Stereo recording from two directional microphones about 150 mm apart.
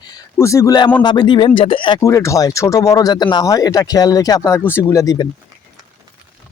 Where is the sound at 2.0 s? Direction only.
20° left (ahead or behind).